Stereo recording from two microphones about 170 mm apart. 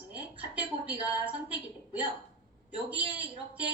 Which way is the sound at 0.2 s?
10° right (ahead or behind).